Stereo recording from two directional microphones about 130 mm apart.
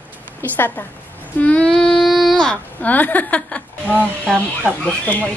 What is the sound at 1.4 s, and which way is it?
Speech, 10° left (ahead or behind).